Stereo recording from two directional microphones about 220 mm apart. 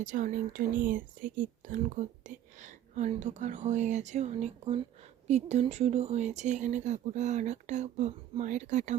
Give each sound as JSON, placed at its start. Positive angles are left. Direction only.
{"t": 0.0, "sound": "speech", "side_deg": -35}